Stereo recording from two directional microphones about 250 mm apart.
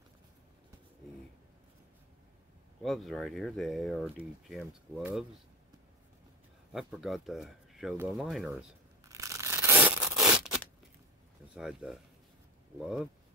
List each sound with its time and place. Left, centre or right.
2.8 s speech: centre
6.7 s a sound: centre
11.5 s speech: centre